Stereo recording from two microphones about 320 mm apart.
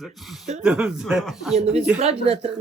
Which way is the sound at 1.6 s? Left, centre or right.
Centre.